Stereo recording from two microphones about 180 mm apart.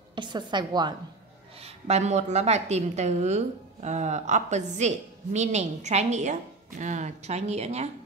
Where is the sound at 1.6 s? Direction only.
35° right (ahead or behind).